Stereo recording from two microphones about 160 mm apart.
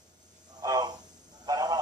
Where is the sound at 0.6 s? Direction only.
25° right (ahead or behind).